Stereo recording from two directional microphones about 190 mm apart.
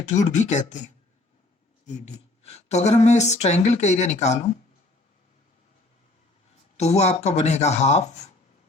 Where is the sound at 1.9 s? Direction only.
35° left (ahead or behind).